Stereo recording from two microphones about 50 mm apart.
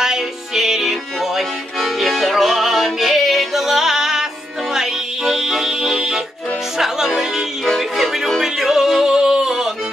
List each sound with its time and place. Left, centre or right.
0.0 s music: centre
7.1 s music: centre